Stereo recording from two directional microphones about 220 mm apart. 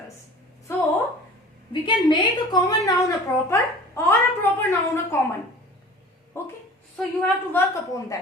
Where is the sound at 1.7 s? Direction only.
20° left (ahead or behind).